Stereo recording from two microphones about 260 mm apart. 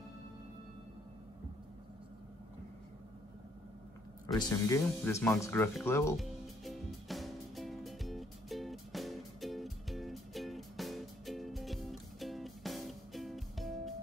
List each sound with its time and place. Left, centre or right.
4.3 s music: centre